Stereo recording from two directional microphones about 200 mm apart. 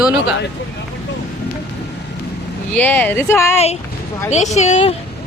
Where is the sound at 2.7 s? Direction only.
10° left (ahead or behind).